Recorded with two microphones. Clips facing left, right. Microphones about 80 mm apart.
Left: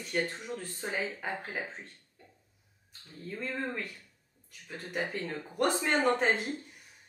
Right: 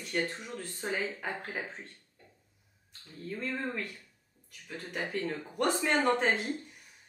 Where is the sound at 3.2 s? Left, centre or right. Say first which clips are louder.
Even; centre.